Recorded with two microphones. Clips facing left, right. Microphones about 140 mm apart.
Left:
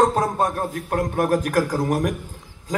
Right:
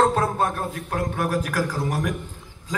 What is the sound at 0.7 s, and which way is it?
A man's voice, 45° left (ahead or behind).